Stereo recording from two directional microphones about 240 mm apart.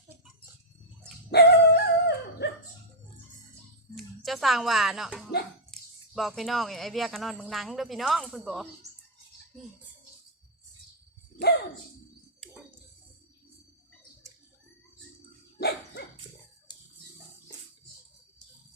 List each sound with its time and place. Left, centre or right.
1.3 s dog: left
3.9 s speech: centre
15.5 s dog: left